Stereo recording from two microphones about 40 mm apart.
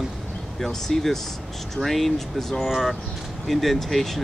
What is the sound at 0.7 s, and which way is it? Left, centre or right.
Speech, centre.